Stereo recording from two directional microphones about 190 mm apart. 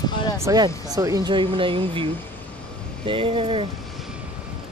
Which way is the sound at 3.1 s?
30° right (ahead or behind).